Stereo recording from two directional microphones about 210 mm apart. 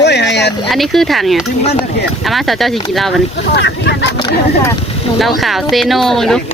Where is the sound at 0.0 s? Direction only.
55° left (ahead or behind).